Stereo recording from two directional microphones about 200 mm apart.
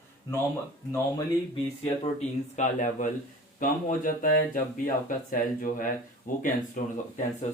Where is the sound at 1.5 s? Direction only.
30° left (ahead or behind).